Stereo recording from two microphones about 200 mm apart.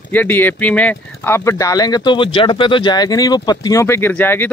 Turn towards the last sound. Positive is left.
turn(degrees=10)  # may be behind; listen again after turning